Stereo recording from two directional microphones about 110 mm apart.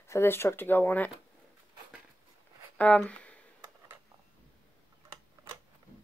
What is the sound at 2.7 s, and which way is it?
Speech, 10° left (ahead or behind).